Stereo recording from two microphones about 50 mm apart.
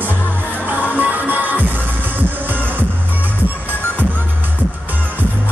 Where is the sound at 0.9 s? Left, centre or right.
Right.